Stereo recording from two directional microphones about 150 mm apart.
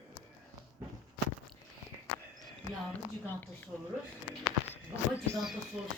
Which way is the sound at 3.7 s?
5° left (ahead or behind).